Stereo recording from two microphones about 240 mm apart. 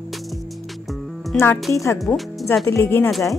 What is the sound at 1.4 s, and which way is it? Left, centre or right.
Speech, centre.